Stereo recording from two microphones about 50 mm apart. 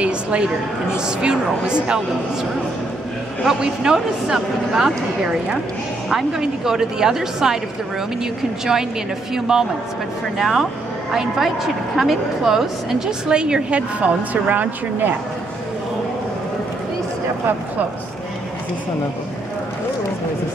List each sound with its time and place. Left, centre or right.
0.0 s a sound: right
0.9 s a woman's voice: centre
3.4 s a woman's voice: centre
9.3 s a woman's voice: centre
10.3 s a woman's voice: centre; by 14.7 s right